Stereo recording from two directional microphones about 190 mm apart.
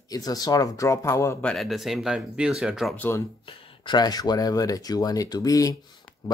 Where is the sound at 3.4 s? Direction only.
25° left (ahead or behind).